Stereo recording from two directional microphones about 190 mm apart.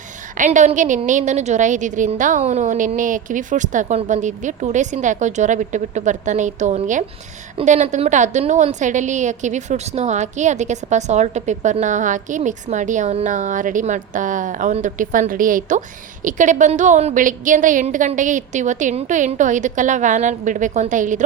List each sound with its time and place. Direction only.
0.3 s a woman's voice: 40° right (ahead or behind)